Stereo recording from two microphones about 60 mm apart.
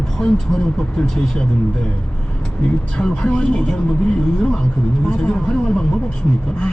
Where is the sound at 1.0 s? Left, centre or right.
Centre.